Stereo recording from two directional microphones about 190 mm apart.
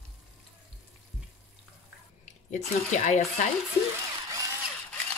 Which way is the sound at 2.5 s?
40° left (ahead or behind).